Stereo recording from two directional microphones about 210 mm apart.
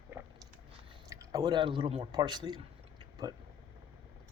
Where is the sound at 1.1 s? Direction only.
15° right (ahead or behind).